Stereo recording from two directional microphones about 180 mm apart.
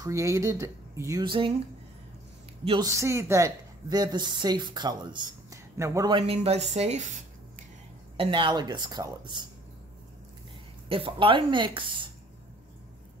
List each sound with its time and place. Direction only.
0.0 s speech: 15° right (ahead or behind)
2.6 s a woman's voice: 30° right (ahead or behind)
2.9 s a woman's voice: 15° right (ahead or behind); by 7.1 s 40° right (ahead or behind)
8.2 s a woman's voice: 30° right (ahead or behind)
10.9 s a woman's voice: 30° right (ahead or behind)